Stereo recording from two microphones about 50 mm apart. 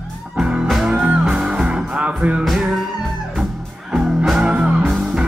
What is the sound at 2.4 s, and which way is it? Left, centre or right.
Music, centre.